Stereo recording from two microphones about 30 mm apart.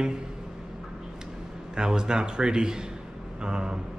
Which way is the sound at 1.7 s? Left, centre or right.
Right.